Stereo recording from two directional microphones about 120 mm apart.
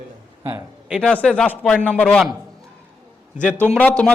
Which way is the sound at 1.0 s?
10° left (ahead or behind).